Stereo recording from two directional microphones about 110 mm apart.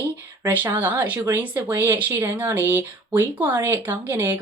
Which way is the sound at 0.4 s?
20° right (ahead or behind).